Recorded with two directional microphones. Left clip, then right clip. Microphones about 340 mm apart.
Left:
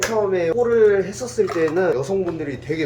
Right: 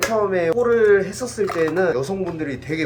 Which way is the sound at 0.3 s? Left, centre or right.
Centre.